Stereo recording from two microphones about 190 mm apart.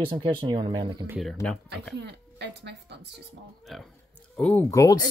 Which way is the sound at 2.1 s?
65° right (ahead or behind).